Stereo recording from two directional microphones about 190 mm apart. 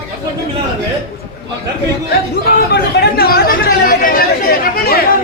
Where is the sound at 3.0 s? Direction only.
55° left (ahead or behind).